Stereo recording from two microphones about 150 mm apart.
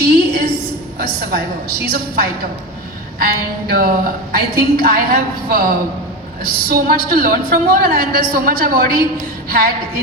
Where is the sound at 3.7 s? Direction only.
75° right (ahead or behind).